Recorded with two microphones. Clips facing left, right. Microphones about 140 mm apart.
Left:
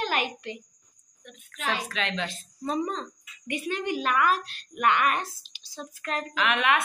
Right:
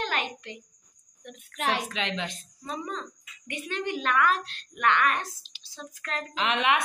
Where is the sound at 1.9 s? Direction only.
20° right (ahead or behind).